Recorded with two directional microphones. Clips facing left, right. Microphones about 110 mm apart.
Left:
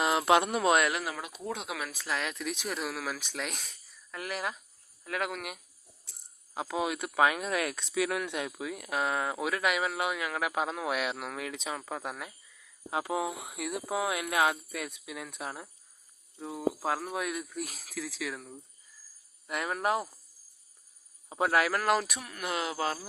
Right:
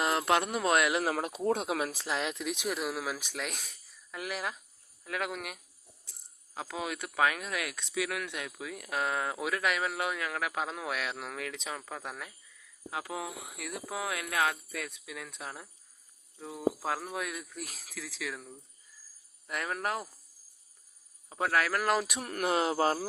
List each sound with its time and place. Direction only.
0.0 s a sound: 5° left (ahead or behind)
0.3 s speech: 10° left (ahead or behind)
1.5 s speech: 40° right (ahead or behind); by 5.5 s centre (ahead or behind)
6.5 s speech: 15° left (ahead or behind)
7.4 s speech: 40° left (ahead or behind)
8.2 s speech: 25° left (ahead or behind)
12.9 s speech: 25° left (ahead or behind)
16.6 s speech: centre (ahead or behind)
21.2 s a man's voice: 15° left (ahead or behind)
22.2 s speech: 50° right (ahead or behind)
22.4 s speech: 35° right (ahead or behind)